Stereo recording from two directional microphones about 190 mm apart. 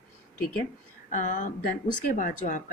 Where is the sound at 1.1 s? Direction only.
40° left (ahead or behind).